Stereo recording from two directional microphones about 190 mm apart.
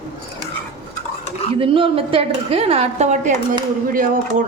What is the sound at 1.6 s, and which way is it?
A woman's voice, 30° right (ahead or behind).